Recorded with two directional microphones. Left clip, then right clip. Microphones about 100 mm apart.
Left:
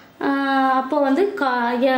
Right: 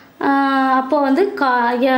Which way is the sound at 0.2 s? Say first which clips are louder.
Right 4 dB; 30° right (ahead or behind).